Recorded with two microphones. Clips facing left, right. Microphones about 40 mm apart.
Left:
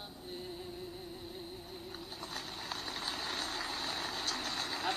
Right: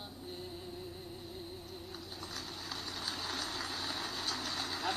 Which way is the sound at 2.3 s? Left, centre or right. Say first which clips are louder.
Left 2 dB; left.